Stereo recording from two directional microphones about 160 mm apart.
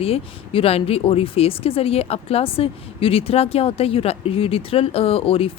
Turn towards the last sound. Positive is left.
turn(degrees=35)  # may be behind; listen again after turning